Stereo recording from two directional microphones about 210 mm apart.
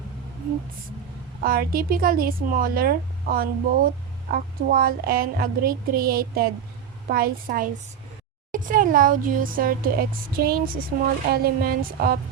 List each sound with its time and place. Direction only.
1.4 s a woman's voice: 45° right (ahead or behind)